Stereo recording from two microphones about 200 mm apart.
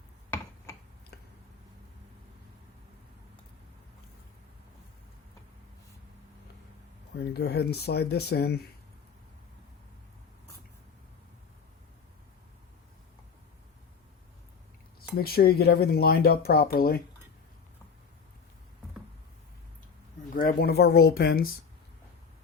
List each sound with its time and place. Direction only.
7.2 s speech: 55° left (ahead or behind)
15.2 s speech: 50° left (ahead or behind)
20.3 s speech: 45° left (ahead or behind)